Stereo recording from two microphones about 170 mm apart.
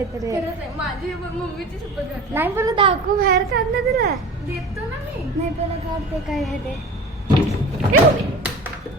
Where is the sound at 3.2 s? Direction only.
65° right (ahead or behind).